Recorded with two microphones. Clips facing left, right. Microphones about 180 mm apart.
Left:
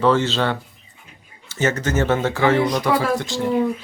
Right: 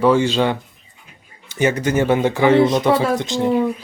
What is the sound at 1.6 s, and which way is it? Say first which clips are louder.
Speech: right 3 dB; 15° right (ahead or behind).